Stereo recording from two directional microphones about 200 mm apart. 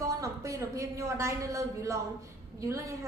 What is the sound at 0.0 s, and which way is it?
A woman's voice, 15° right (ahead or behind).